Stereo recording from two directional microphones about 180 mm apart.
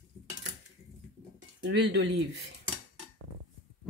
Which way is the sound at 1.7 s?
70° right (ahead or behind).